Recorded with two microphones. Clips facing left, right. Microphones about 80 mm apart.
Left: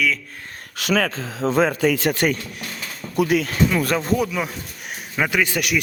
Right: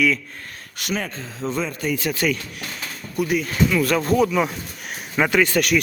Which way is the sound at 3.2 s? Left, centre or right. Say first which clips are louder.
Left 3 dB; left.